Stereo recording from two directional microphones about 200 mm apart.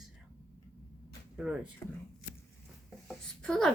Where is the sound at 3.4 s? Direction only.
5° left (ahead or behind).